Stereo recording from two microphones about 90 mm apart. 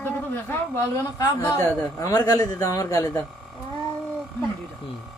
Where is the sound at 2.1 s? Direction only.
45° left (ahead or behind).